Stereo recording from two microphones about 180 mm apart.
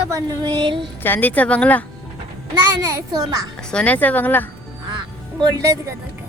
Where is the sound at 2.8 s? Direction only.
20° right (ahead or behind).